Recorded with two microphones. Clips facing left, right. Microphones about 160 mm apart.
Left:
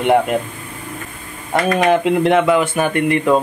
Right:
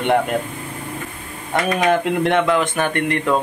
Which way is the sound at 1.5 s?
Centre (ahead or behind).